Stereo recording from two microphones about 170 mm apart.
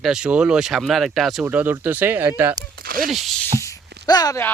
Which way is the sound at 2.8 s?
60° right (ahead or behind).